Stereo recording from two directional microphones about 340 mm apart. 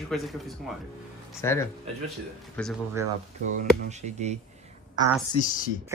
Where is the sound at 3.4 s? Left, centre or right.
Right.